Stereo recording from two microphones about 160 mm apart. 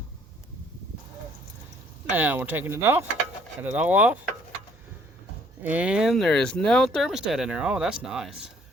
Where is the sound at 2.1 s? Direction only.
10° right (ahead or behind).